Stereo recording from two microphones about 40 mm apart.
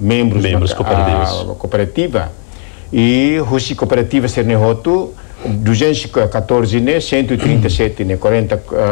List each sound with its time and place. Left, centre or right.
0.0 s a man's voice: centre